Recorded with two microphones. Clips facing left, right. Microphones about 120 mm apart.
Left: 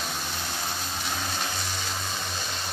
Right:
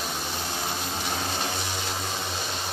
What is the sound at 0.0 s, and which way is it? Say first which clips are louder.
Vehicle: right 2 dB; 10° right (ahead or behind).